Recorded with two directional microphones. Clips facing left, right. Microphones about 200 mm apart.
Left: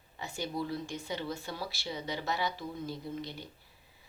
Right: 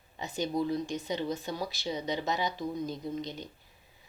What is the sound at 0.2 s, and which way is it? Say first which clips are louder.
Speech: right 5 dB; 20° right (ahead or behind).